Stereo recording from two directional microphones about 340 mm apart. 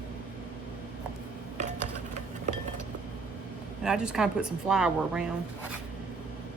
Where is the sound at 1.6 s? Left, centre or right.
Right.